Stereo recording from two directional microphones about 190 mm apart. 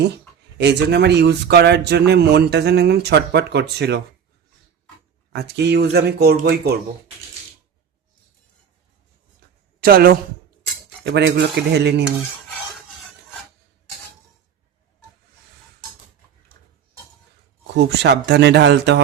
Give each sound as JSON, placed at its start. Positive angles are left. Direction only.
{"t": 0.6, "sound": "speech", "side_deg": -60}
{"t": 5.3, "sound": "speech", "side_deg": -60}
{"t": 9.8, "sound": "speech", "side_deg": -55}
{"t": 17.7, "sound": "speech", "side_deg": -60}